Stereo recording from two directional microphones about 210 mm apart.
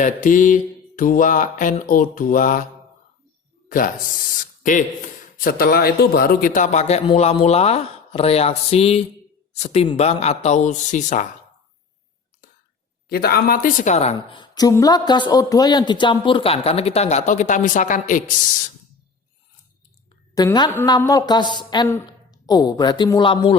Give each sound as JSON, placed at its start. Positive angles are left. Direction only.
{"t": 0.0, "sound": "speech", "side_deg": 40}
{"t": 3.7, "sound": "speech", "side_deg": 40}
{"t": 5.4, "sound": "speech", "side_deg": 45}
{"t": 13.1, "sound": "a woman's voice", "side_deg": 45}
{"t": 20.3, "sound": "a woman's voice", "side_deg": 20}